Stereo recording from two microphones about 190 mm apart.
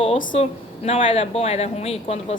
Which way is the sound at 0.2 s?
40° left (ahead or behind).